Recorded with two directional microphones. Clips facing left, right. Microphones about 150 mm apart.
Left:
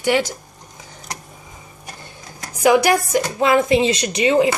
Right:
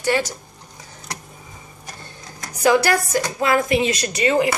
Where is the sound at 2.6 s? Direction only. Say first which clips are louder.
Left 2 dB; 15° left (ahead or behind).